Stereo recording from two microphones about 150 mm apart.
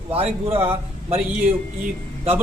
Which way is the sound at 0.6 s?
40° right (ahead or behind).